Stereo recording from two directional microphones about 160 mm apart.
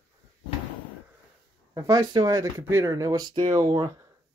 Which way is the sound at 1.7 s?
25° right (ahead or behind).